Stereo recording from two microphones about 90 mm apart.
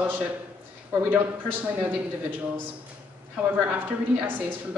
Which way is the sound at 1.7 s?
20° right (ahead or behind).